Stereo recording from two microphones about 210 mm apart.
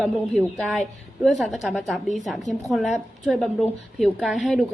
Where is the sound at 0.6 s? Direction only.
Centre (ahead or behind).